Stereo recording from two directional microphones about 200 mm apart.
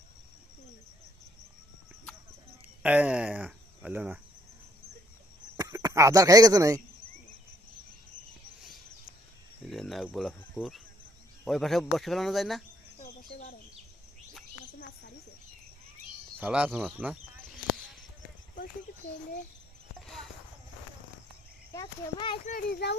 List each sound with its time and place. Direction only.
2.8 s speech: 10° right (ahead or behind)
5.5 s speech: 20° right (ahead or behind)
9.6 s a sound: centre (ahead or behind)
11.4 s speech: centre (ahead or behind)
13.0 s a sound: 45° left (ahead or behind)
16.4 s speech: 5° right (ahead or behind)
21.7 s a child's voice: 20° left (ahead or behind)
22.4 s a child's voice: 50° left (ahead or behind)